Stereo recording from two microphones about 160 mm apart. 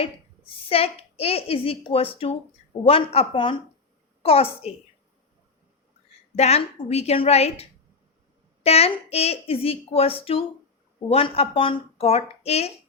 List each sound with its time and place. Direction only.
0.0 s a woman's voice: 35° left (ahead or behind)
6.3 s a woman's voice: 40° left (ahead or behind)